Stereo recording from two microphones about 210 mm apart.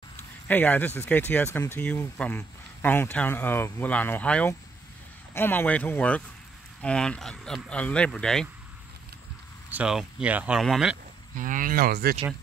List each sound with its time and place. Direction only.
0.5 s speech: 10° left (ahead or behind)
9.7 s speech: 5° right (ahead or behind)
11.3 s speech: 40° right (ahead or behind)